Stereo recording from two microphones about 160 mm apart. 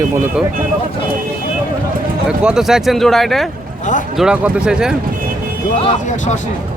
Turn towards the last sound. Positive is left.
turn(degrees=-5)  # may be behind; listen again after turning